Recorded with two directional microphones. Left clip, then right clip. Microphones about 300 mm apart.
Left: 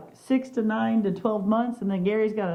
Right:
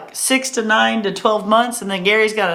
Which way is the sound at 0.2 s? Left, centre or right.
Centre.